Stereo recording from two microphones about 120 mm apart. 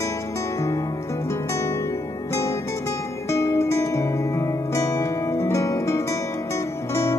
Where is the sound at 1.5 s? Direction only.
25° left (ahead or behind).